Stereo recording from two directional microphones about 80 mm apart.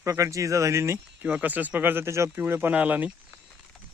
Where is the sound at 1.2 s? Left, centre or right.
Centre.